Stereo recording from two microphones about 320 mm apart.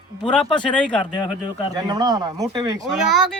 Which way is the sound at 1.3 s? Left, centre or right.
Centre.